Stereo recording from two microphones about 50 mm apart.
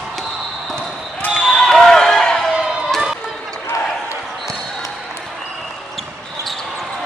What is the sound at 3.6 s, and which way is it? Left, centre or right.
Basketball bounce, left.